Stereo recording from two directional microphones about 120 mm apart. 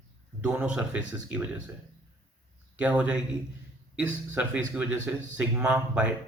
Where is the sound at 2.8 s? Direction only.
10° right (ahead or behind).